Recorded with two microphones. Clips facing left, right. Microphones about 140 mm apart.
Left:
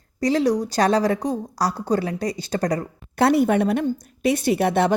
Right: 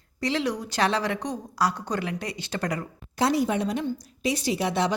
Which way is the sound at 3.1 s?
60° left (ahead or behind).